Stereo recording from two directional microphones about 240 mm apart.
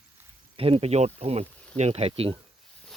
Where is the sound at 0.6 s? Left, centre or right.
Right.